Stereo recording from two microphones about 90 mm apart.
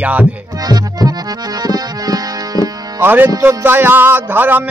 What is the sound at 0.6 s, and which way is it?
Music, 45° right (ahead or behind).